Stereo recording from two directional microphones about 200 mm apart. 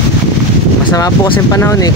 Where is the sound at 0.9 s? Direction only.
15° left (ahead or behind).